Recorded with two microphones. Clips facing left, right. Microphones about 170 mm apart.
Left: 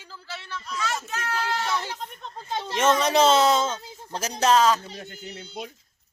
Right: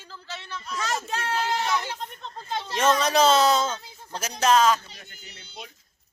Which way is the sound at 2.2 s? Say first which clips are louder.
Left 2 dB; 15° left (ahead or behind).